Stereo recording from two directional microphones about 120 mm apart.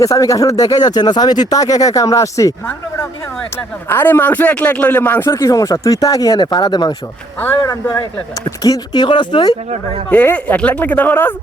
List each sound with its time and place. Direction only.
0.0 s speech: 30° left (ahead or behind)
3.8 s speech: 15° left (ahead or behind); by 9.6 s 40° left (ahead or behind)
10.1 s speech: 15° left (ahead or behind)